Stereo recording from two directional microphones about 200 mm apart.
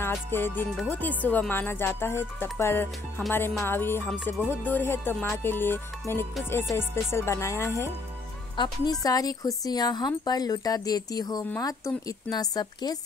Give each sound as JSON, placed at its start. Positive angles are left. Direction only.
{"t": 0.1, "sound": "speech", "side_deg": 10}